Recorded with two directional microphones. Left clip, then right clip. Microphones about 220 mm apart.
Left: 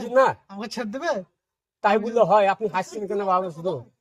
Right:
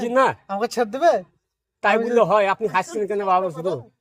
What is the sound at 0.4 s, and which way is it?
Speech, 45° right (ahead or behind).